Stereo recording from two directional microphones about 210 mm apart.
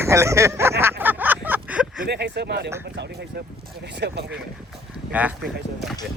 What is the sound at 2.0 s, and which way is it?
Speech, 50° right (ahead or behind).